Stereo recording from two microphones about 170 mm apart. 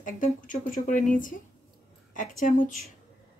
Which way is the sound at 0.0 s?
50° left (ahead or behind).